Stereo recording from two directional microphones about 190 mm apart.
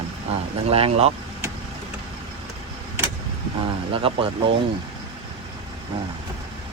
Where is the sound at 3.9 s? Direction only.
30° right (ahead or behind).